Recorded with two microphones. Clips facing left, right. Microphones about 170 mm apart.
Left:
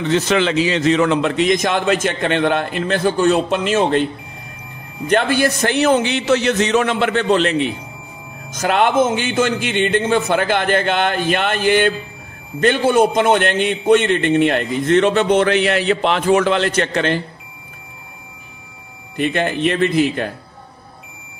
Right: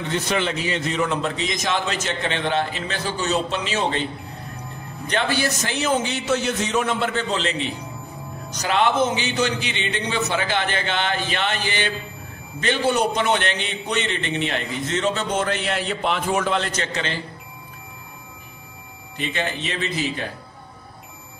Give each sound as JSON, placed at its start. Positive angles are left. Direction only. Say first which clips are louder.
{"t": 0.1, "sound": "a man's voice", "louder": "left 7 dB", "side_deg": 90}
{"t": 5.0, "sound": "a man's voice", "louder": "left 7 dB", "side_deg": 50}
{"t": 19.1, "sound": "a man's voice", "louder": "left 8 dB", "side_deg": 55}